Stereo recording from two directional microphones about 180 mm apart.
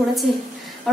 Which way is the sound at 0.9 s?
Centre (ahead or behind).